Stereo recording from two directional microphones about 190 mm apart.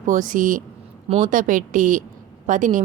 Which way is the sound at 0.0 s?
45° right (ahead or behind).